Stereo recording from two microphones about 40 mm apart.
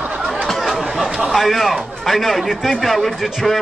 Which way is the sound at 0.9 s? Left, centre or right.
Centre.